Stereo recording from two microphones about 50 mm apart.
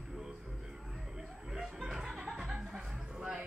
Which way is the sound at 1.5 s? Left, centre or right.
Centre.